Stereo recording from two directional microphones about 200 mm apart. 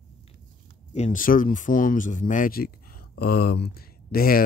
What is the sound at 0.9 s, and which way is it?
Speech, 35° left (ahead or behind).